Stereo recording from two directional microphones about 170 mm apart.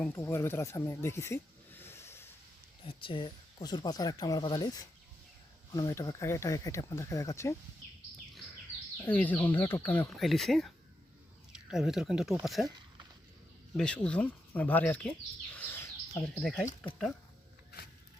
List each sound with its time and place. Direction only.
0.0 s speech: 15° left (ahead or behind)
2.8 s speech: 30° left (ahead or behind)
9.0 s speech: 10° left (ahead or behind)
13.7 s speech: 5° left (ahead or behind)
15.5 s bird: 15° left (ahead or behind)
16.4 s speech: centre (ahead or behind)